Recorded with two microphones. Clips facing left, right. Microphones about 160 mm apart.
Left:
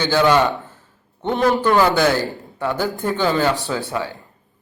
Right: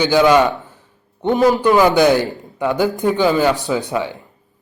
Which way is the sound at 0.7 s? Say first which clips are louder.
Right 1 dB; 15° right (ahead or behind).